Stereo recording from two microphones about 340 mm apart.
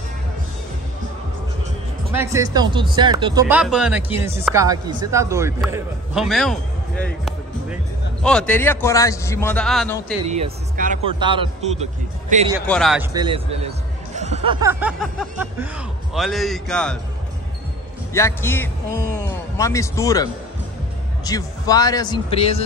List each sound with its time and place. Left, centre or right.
2.1 s a man's voice: centre
10.2 s a man's voice: centre
12.6 s a man's voice: centre
13.1 s a man's voice: centre
18.1 s a man's voice: centre